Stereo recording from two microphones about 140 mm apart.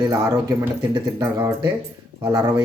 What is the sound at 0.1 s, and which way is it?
Speech, 20° right (ahead or behind).